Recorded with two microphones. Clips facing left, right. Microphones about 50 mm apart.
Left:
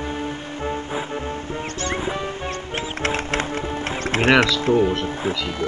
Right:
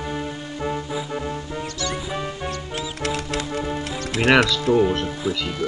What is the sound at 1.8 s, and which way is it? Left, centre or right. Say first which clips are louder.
Music: left 3 dB; left.